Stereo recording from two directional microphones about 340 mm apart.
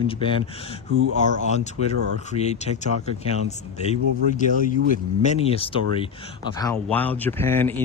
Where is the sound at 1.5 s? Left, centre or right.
Centre.